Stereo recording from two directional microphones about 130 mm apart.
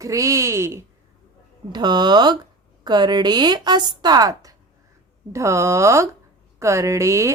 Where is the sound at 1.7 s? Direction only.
35° right (ahead or behind).